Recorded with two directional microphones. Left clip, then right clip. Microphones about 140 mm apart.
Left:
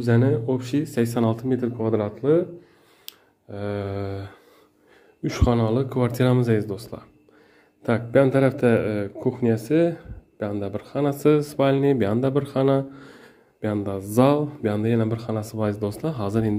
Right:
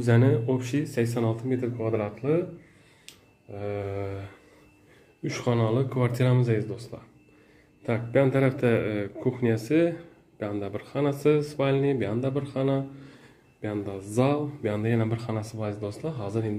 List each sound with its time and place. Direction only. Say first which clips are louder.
0.0 s speech: left 2 dB; 10° left (ahead or behind)
0.9 s a man's voice: left 4 dB; 30° left (ahead or behind)
11.1 s speech: left 5 dB; 35° left (ahead or behind)
14.6 s a man's voice: left 4 dB; 20° left (ahead or behind)
15.5 s speech: left 7 dB; 40° left (ahead or behind)